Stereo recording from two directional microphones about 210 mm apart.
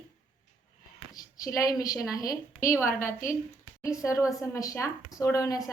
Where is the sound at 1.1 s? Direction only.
15° left (ahead or behind).